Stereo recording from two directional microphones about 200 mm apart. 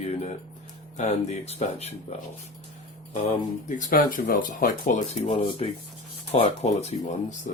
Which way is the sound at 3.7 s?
40° left (ahead or behind).